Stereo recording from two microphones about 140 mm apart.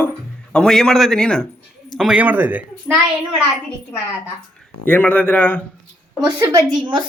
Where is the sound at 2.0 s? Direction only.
10° right (ahead or behind).